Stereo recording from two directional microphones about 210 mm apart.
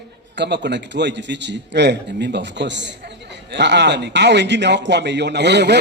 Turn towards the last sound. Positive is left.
turn(degrees=-55)  # may be behind; listen again after turning